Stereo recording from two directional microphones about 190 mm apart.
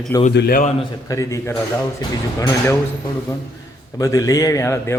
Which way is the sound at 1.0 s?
15° left (ahead or behind).